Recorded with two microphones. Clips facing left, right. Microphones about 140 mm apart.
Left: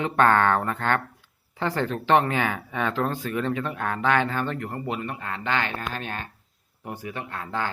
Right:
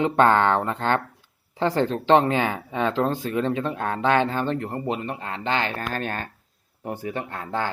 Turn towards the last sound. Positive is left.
turn(degrees=-30)  # may be behind; listen again after turning